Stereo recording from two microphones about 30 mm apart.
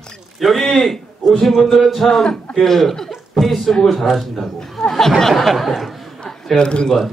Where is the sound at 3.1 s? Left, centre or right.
Centre.